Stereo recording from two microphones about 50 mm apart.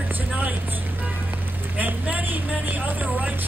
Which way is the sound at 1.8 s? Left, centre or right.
Right.